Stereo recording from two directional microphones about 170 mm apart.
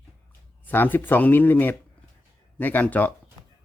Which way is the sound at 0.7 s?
10° left (ahead or behind).